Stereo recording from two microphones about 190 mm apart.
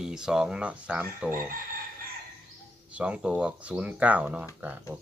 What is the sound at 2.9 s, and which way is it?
Speech, 5° right (ahead or behind).